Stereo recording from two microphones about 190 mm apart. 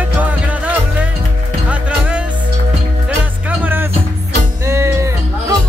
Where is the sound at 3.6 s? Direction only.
10° right (ahead or behind).